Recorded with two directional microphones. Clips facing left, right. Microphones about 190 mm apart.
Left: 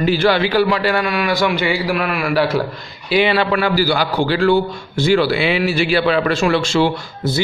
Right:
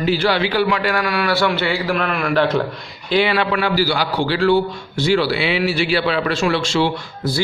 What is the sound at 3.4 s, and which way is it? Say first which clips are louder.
A man's voice: left 2 dB; 40° left (ahead or behind).